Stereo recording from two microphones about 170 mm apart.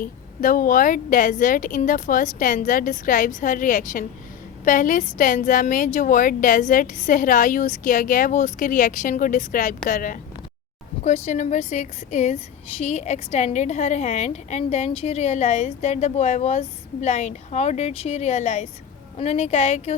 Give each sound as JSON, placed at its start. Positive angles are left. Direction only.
{"t": 0.0, "sound": "a woman's voice", "side_deg": 55}